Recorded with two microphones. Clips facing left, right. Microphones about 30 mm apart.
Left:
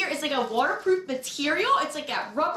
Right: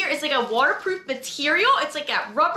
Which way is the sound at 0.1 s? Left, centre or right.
Right.